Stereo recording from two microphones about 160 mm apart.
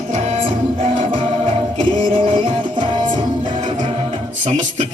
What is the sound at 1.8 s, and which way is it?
Music, 30° right (ahead or behind).